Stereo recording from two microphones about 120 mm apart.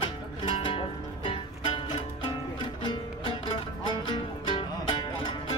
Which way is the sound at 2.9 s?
40° left (ahead or behind).